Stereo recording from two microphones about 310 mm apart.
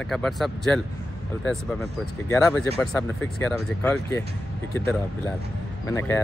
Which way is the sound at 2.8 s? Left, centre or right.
Centre.